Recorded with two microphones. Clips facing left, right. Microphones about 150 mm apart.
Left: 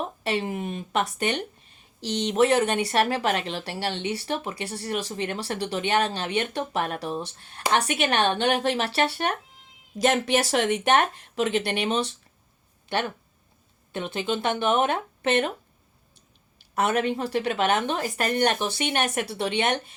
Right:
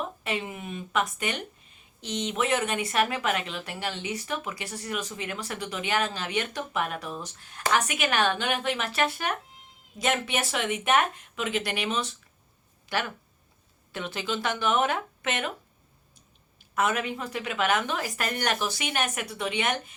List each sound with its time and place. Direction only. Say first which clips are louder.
0.0 s speech: left 4 dB; 35° left (ahead or behind)
13.9 s speech: left 4 dB; 20° left (ahead or behind)
16.6 s speech: left 3 dB; 35° left (ahead or behind)